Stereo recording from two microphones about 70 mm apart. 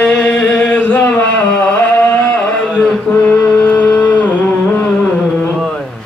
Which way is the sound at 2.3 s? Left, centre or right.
Centre.